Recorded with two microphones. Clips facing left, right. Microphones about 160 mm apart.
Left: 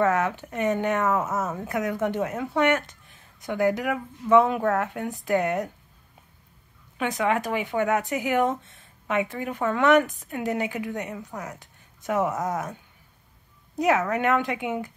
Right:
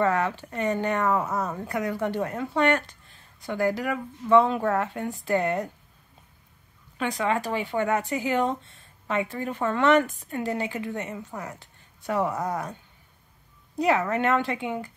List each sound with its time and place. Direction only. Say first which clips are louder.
0.1 s speech: left 1 dB; 15° left (ahead or behind)
1.0 s speech: even; 5° left (ahead or behind)
1.7 s speech: left 2 dB; 15° left (ahead or behind)
2.2 s speech: left 1 dB; 5° left (ahead or behind)
2.5 s speech: even; 15° left (ahead or behind)
7.0 s speech: left 1 dB; 15° left (ahead or behind)
11.3 s speech: even; centre (ahead or behind)
11.6 s a sound: left 1 dB; 15° left (ahead or behind)
12.3 s speech: left 1 dB; centre (ahead or behind)
14.1 s speech: even; 15° left (ahead or behind)